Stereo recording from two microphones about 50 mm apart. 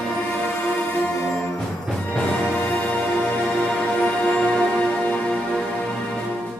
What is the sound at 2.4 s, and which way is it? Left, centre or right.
Music, left.